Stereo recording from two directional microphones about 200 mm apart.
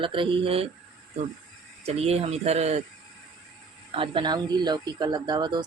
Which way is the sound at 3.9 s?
25° right (ahead or behind).